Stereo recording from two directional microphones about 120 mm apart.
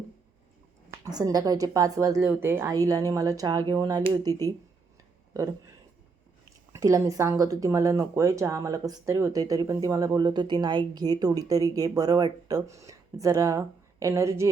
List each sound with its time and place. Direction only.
1.0 s a woman's voice: 30° right (ahead or behind)
6.7 s a woman's voice: 25° right (ahead or behind)